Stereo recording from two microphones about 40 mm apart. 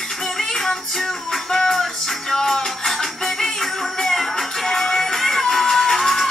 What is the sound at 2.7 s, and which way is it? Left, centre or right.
Music, centre.